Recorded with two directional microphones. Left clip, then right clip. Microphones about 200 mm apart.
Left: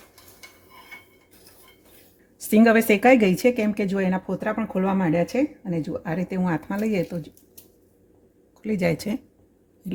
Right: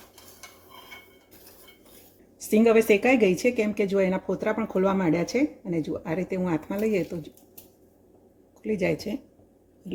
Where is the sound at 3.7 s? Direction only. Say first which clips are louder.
Right 1 dB; 45° left (ahead or behind).